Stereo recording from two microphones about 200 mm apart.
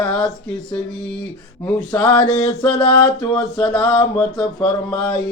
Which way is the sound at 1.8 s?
20° left (ahead or behind).